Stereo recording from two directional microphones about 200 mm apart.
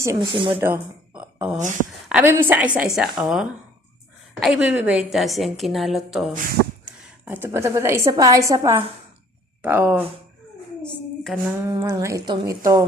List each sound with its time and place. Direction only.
0.0 s speech: 20° right (ahead or behind)
0.6 s a woman's voice: 10° right (ahead or behind)
6.8 s a woman's voice: 10° right (ahead or behind)
11.2 s music: centre (ahead or behind)
11.6 s a woman's voice: 15° right (ahead or behind)